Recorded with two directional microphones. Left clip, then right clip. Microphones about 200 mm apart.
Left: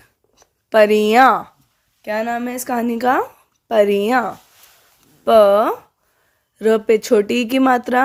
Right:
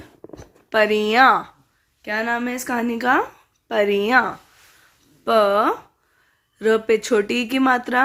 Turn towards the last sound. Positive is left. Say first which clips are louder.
# left 3 dB
turn(degrees=40)  # may be behind; listen again after turning